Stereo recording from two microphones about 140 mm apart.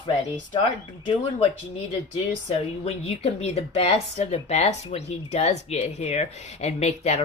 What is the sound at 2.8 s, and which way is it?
Speech, 45° left (ahead or behind).